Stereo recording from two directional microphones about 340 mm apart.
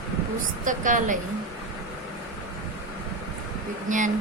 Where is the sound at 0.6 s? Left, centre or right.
Right.